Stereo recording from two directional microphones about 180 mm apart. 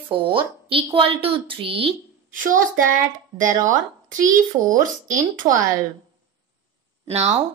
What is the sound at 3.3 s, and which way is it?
Speech, 45° right (ahead or behind).